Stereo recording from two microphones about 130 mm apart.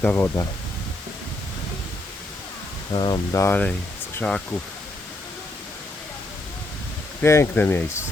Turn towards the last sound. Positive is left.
turn(degrees=15)  # may be behind; listen again after turning